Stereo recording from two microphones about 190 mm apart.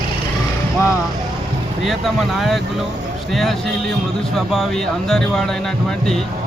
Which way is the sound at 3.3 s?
Centre (ahead or behind).